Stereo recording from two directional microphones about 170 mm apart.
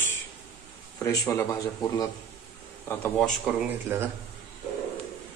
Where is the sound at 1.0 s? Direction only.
15° left (ahead or behind).